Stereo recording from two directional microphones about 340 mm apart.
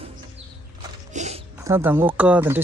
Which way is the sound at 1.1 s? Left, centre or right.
Centre.